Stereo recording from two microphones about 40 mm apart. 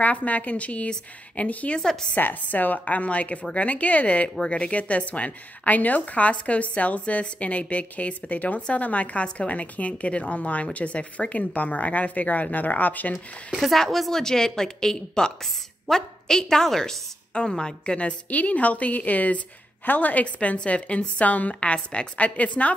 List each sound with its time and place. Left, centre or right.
0.0 s a woman's voice: left
1.8 s speech: centre
2.1 s a woman's voice: left
4.5 s a woman's voice: left
8.5 s a woman's voice: left
8.8 s a woman's voice: left
13.5 s speech: centre
14.2 s speech: centre
17.3 s a woman's voice: left
18.3 s a woman's voice: left
20.3 s a woman's voice: left